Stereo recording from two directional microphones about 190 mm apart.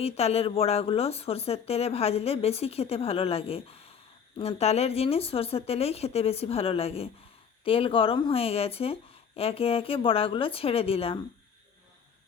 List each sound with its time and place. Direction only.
0.0 s a woman's voice: 35° left (ahead or behind)